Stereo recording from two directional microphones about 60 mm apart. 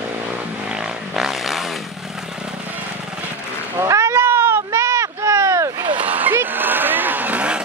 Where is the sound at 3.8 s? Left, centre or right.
Right.